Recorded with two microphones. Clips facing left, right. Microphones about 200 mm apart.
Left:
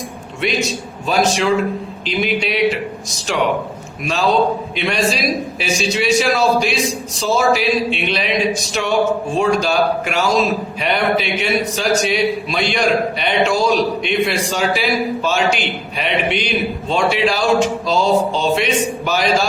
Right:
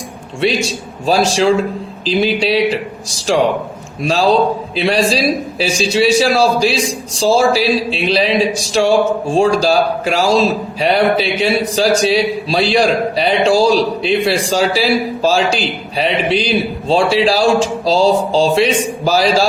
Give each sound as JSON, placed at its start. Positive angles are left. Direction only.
{"t": 0.4, "sound": "a man's voice", "side_deg": -30}